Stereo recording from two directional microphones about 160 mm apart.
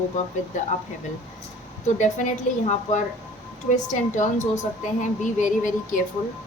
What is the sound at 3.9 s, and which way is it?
A woman's voice, 50° left (ahead or behind).